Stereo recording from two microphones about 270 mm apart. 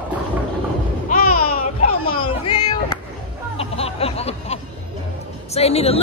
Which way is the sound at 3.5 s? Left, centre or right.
Left.